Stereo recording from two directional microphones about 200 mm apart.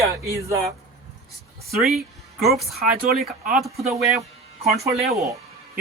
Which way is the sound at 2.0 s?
Centre (ahead or behind).